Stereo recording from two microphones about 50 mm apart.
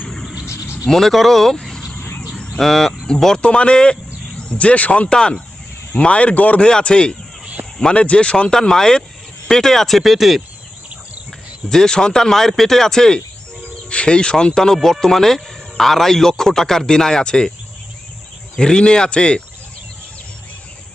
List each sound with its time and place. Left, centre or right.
0.4 s a sound: left
0.9 s speech: centre
2.6 s a man's voice: centre; by 6.7 s left
6.7 s a man's voice: centre
7.6 s a sound: right
7.9 s a man's voice: left; by 10.4 s centre
11.7 s a man's voice: centre
18.6 s a man's voice: centre